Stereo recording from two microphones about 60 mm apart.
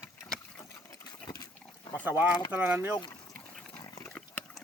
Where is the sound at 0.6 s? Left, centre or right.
Left.